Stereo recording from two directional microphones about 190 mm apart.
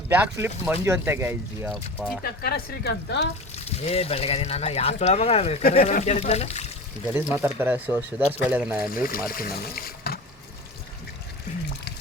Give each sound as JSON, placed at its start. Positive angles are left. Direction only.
{"t": 0.1, "sound": "speech", "side_deg": -10}
{"t": 1.7, "sound": "speech", "side_deg": 0}
{"t": 2.2, "sound": "speech", "side_deg": 50}
{"t": 3.5, "sound": "speech", "side_deg": 35}
{"t": 7.1, "sound": "speech", "side_deg": -15}
{"t": 9.2, "sound": "speech", "side_deg": 50}